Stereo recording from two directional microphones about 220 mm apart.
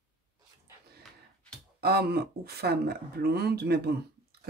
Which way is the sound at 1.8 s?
45° right (ahead or behind).